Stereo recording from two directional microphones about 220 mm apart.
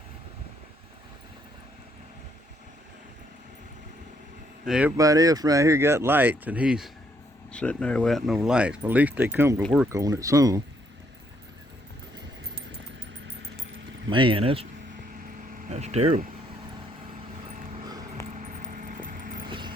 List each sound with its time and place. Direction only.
4.6 s speech: 5° right (ahead or behind)
14.1 s speech: 20° right (ahead or behind)
15.7 s speech: 30° right (ahead or behind)
18.3 s vehicle: 35° right (ahead or behind)
19.5 s vehicle: 20° right (ahead or behind)